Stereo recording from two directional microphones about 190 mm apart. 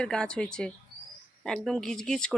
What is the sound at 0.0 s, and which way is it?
Speech, 5° left (ahead or behind).